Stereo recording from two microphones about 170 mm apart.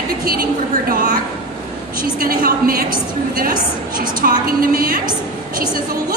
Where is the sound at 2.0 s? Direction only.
60° right (ahead or behind).